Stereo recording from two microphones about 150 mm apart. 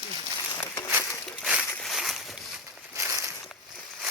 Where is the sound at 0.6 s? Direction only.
15° left (ahead or behind).